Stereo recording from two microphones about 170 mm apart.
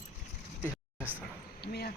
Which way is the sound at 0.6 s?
10° right (ahead or behind).